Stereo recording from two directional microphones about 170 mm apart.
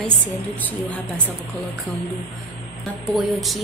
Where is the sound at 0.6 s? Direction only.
10° left (ahead or behind).